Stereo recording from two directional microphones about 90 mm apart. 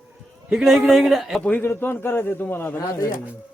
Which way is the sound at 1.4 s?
20° left (ahead or behind).